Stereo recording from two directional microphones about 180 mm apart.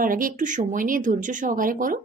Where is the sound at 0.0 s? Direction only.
50° right (ahead or behind).